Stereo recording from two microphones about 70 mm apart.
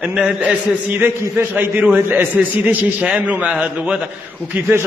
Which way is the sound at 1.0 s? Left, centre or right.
Right.